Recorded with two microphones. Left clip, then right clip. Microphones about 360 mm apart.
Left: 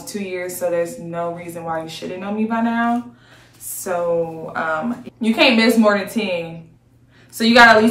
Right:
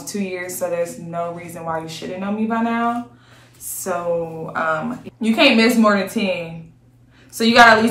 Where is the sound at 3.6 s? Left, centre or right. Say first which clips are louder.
Even; centre.